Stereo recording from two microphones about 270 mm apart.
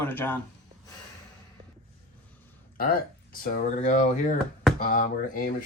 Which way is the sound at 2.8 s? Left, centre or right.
Left.